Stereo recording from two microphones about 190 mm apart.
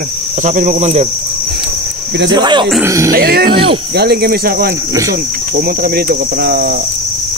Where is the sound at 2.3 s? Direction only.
25° right (ahead or behind).